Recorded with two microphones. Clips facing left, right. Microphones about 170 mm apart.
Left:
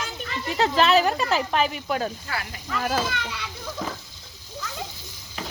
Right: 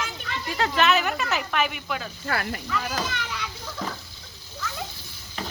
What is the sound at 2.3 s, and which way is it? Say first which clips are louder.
Speech: right 5 dB; 55° right (ahead or behind).